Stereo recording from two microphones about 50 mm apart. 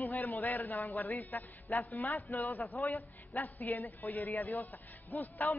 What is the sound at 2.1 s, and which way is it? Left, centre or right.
Speech, left.